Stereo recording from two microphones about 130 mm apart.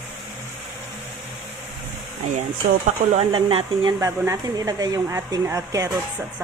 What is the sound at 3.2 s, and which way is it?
Speech, 45° right (ahead or behind).